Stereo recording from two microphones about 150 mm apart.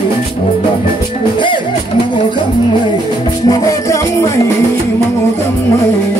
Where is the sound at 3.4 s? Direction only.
20° left (ahead or behind).